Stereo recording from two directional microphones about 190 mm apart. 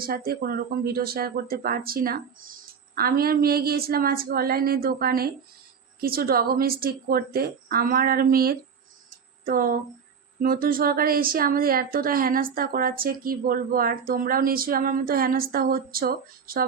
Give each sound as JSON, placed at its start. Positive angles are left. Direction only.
{"t": 0.0, "sound": "speech", "side_deg": -50}